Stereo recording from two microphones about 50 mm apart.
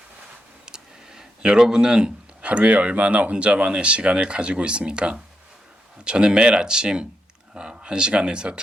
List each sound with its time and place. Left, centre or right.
0.6 s speech: centre